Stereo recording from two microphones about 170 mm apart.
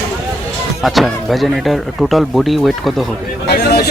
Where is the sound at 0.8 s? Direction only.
Centre (ahead or behind).